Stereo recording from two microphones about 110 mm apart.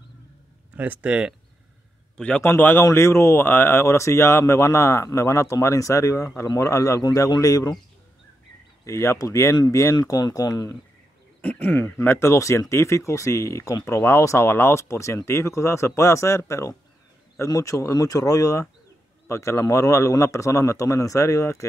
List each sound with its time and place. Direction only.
0.7 s speech: 15° right (ahead or behind)
2.1 s a man's voice: 10° left (ahead or behind)
2.4 s speech: 20° left (ahead or behind)
8.8 s speech: 25° left (ahead or behind)
9.9 s speech: 40° left (ahead or behind)
11.4 s speech: 15° left (ahead or behind)